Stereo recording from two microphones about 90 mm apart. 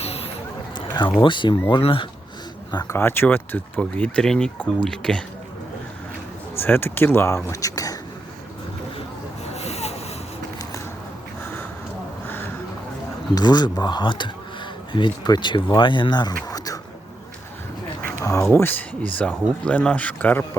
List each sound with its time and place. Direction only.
0.8 s a sound: 65° left (ahead or behind)
1.2 s speech: 60° left (ahead or behind)
1.7 s speech: 75° left (ahead or behind)
2.8 s speech: 25° left (ahead or behind); by 5.2 s 10° left (ahead or behind)
6.6 s speech: 25° left (ahead or behind); by 7.9 s 40° left (ahead or behind)
13.3 s speech: 50° left (ahead or behind)
18.2 s a sound: 30° left (ahead or behind)
18.5 s speech: 20° left (ahead or behind)